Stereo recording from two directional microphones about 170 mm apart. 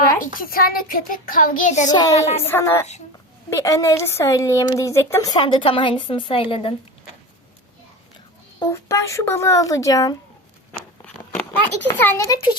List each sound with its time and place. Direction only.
0.3 s child singing: 60° left (ahead or behind)
2.1 s a woman's voice: 40° left (ahead or behind)
2.5 s a woman's voice: 15° left (ahead or behind); by 6.7 s 30° left (ahead or behind)
8.5 s speech: 15° left (ahead or behind)
10.7 s a sound: 10° left (ahead or behind)